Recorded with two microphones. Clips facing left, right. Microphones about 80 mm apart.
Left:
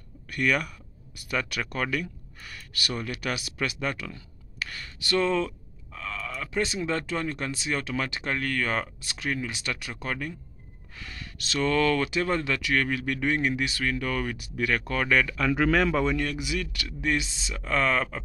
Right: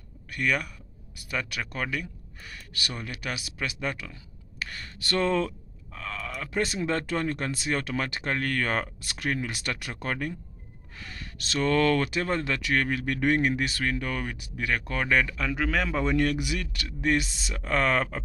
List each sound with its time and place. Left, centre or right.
1.3 s speech: right
4.6 s speech: right
13.9 s speech: right
15.5 s speech: centre
16.2 s speech: right
16.5 s speech: right